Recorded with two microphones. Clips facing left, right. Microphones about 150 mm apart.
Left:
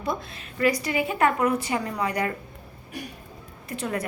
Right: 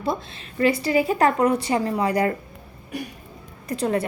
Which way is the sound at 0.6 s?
30° right (ahead or behind).